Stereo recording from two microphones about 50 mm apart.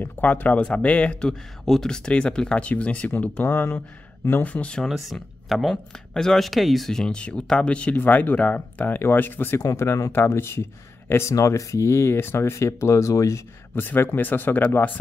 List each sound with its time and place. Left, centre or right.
0.0 s speech: left
1.7 s speech: centre
2.0 s speech: left
3.4 s speech: left
4.3 s speech: left
4.8 s speech: centre
7.1 s speech: left
8.0 s speech: left
9.7 s speech: left
10.1 s speech: left
12.2 s speech: left
13.7 s speech: left